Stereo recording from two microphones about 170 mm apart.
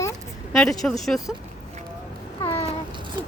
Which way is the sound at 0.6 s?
Centre (ahead or behind).